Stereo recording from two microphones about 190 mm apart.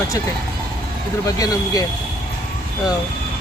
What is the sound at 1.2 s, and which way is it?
Speech, 20° left (ahead or behind).